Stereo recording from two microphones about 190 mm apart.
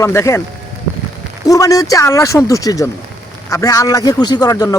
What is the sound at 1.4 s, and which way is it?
Speech, 15° left (ahead or behind).